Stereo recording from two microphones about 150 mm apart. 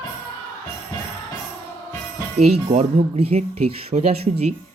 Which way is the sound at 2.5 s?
45° right (ahead or behind).